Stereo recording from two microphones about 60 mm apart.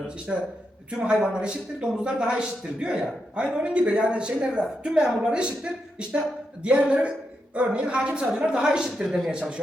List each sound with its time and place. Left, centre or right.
0.3 s speech: centre
6.6 s a woman's voice: centre